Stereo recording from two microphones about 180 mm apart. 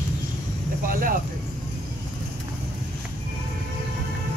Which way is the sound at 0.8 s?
50° right (ahead or behind).